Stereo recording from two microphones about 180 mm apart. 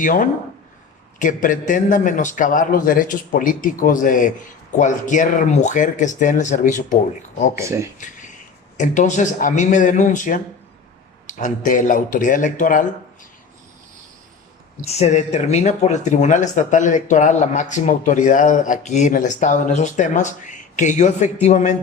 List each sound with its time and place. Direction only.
0.0 s speech: 50° left (ahead or behind)
7.6 s speech: 15° right (ahead or behind)
8.8 s speech: 45° left (ahead or behind)
14.8 s speech: 40° left (ahead or behind)